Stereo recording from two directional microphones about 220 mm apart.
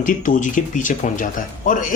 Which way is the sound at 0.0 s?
35° left (ahead or behind).